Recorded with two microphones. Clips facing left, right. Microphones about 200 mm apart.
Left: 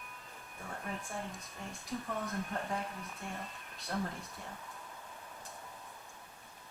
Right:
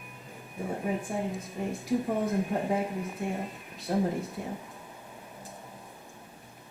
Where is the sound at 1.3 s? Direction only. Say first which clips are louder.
Right 12 dB; centre (ahead or behind).